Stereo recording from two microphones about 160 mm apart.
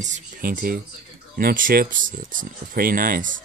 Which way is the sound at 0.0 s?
55° right (ahead or behind).